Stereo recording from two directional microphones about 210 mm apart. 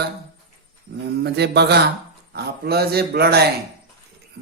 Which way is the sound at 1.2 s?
50° right (ahead or behind).